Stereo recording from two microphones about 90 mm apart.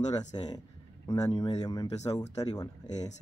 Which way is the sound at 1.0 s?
40° left (ahead or behind).